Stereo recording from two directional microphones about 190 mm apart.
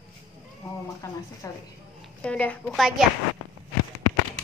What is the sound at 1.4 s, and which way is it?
Speech, 15° left (ahead or behind).